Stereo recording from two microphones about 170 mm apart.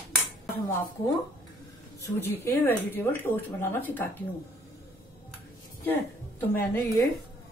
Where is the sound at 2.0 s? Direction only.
15° left (ahead or behind).